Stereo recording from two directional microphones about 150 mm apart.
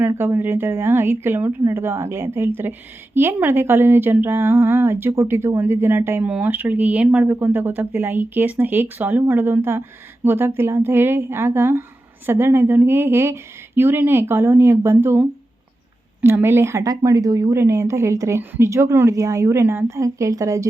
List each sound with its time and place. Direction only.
0.1 s a woman's voice: 15° right (ahead or behind)